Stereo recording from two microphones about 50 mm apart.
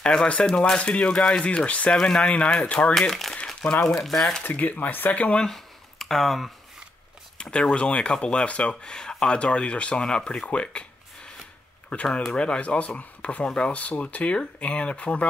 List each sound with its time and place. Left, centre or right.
0.0 s speech: centre
1.9 s speech: centre
2.9 s speech: centre
4.4 s speech: left
5.4 s a sound: centre
7.5 s speech: left
11.9 s speech: left